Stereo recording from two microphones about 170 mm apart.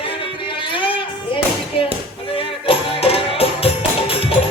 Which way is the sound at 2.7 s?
35° left (ahead or behind).